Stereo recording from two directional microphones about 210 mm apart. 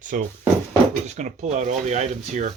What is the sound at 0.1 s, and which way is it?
Speech, 40° right (ahead or behind).